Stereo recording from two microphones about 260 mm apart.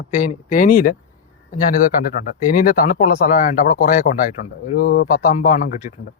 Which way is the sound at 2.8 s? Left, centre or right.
Left.